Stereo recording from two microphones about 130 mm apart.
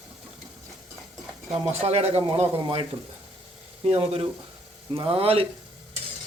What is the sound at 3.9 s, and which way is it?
Speech, 50° right (ahead or behind).